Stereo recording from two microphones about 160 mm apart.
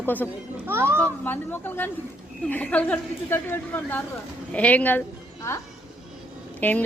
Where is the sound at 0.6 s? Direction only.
15° right (ahead or behind).